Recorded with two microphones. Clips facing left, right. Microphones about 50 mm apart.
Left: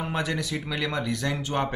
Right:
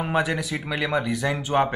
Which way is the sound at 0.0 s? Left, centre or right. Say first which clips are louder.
Right 5 dB; centre.